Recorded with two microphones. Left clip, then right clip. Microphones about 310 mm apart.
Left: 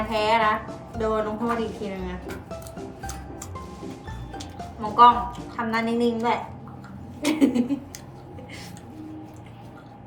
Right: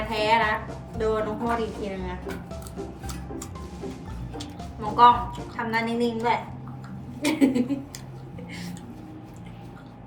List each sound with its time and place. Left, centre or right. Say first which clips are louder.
0.1 s a woman's voice: left 1 dB; centre
4.4 s a woman's voice: left 2 dB; centre